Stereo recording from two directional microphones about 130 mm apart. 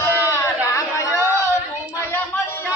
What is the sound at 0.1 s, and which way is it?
Chatter, 20° left (ahead or behind).